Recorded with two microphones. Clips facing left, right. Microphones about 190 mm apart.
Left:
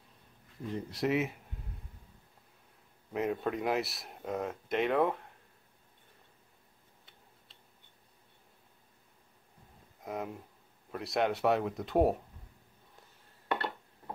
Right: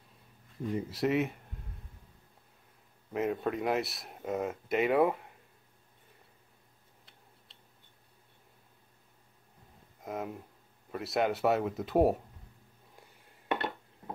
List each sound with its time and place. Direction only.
0.7 s speech: centre (ahead or behind)
3.1 s speech: centre (ahead or behind)
9.9 s a sound: centre (ahead or behind)
10.9 s speech: centre (ahead or behind)